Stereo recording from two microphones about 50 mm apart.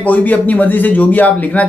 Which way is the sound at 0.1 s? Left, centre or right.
Left.